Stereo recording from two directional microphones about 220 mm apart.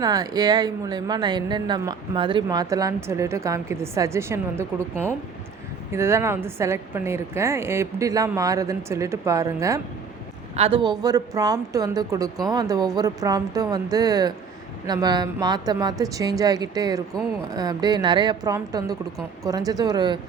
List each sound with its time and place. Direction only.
0.0 s speech: 15° right (ahead or behind)
10.5 s speech: 25° right (ahead or behind)